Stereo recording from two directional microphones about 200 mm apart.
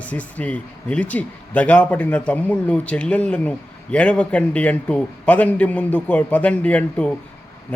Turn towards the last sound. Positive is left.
turn(degrees=5)  # may be behind; listen again after turning